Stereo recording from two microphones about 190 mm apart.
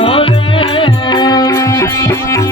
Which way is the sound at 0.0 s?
30° left (ahead or behind).